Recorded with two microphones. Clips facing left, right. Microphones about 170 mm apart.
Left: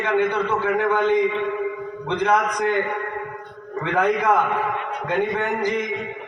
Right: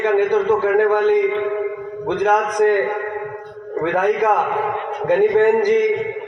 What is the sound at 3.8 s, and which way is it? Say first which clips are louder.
Speech: right 4 dB; 45° right (ahead or behind).